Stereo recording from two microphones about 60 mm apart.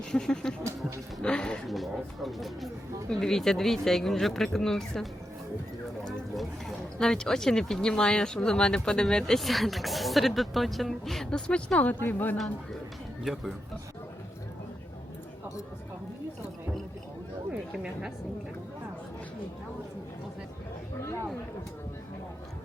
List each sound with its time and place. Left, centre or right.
0.1 s speech: centre
1.6 s speech: centre
6.3 s speech: centre
11.3 s a woman's voice: centre
13.2 s speech: centre